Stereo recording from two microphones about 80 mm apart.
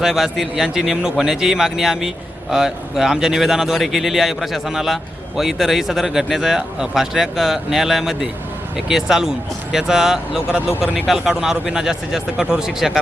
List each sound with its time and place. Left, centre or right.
0.0 s a man's voice: centre
10.7 s speech: left
10.9 s speech: centre